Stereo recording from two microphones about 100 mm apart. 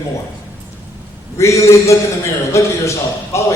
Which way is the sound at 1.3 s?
30° left (ahead or behind).